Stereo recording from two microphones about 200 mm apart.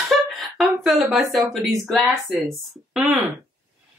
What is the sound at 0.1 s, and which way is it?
A woman's voice, centre (ahead or behind).